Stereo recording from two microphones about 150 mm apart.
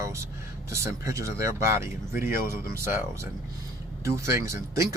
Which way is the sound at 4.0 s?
20° right (ahead or behind).